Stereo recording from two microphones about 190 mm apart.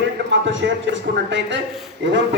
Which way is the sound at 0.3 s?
70° right (ahead or behind).